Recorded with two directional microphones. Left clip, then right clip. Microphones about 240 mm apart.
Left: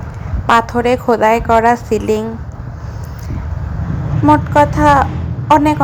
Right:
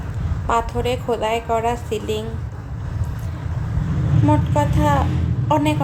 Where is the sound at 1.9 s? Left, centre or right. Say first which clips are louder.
Left 9 dB; left.